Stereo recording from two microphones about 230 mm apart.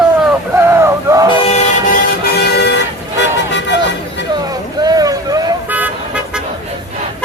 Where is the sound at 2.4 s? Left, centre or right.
Left.